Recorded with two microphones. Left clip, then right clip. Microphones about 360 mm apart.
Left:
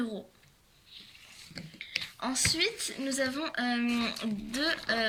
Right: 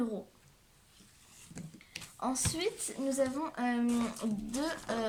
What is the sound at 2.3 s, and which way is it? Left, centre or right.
Speech, right.